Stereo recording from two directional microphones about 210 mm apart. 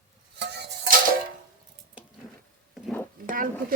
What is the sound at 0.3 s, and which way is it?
Music, 50° right (ahead or behind).